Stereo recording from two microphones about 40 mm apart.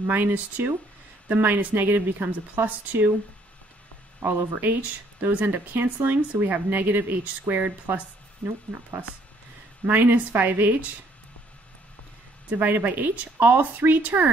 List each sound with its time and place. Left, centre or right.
0.0 s speech: right
4.2 s speech: right
5.3 s speech: right
9.8 s speech: right
12.5 s speech: right